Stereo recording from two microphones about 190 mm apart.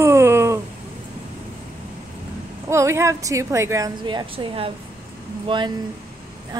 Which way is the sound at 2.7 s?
15° right (ahead or behind).